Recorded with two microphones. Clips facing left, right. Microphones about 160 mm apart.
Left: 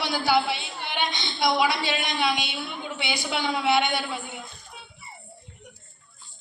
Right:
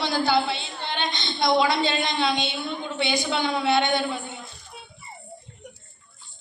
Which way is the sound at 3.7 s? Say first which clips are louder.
Right 2 dB; 20° right (ahead or behind).